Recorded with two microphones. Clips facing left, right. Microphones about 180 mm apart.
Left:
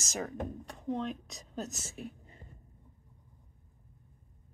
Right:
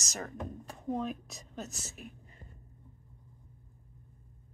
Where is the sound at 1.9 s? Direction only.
30° left (ahead or behind).